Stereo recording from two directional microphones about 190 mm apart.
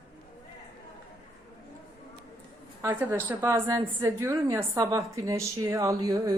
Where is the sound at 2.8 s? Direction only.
10° right (ahead or behind).